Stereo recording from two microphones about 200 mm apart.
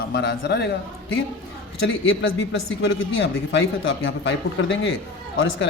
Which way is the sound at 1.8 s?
70° left (ahead or behind).